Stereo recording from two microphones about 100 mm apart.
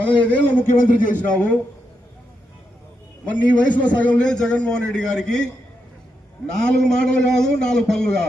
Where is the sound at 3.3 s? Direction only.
15° left (ahead or behind).